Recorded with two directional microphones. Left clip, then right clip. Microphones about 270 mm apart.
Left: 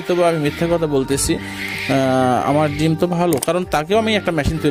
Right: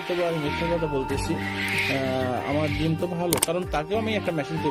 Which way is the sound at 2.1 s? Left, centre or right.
Left.